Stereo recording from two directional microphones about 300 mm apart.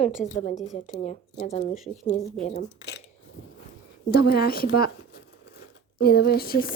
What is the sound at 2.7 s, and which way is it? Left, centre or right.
Speech, left.